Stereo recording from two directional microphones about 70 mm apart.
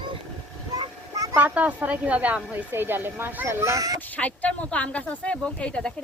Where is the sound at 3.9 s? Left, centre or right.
Left.